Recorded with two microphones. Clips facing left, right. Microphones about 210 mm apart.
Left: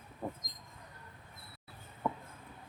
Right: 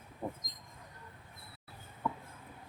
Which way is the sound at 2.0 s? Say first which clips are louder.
Left 2 dB; 35° left (ahead or behind).